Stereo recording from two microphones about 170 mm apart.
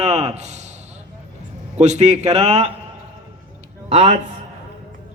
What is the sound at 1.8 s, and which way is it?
Speech, 45° right (ahead or behind).